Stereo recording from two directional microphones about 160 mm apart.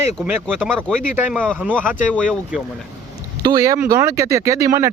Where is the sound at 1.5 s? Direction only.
5° left (ahead or behind).